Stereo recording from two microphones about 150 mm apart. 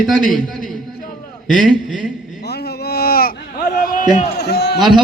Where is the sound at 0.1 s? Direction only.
Centre (ahead or behind).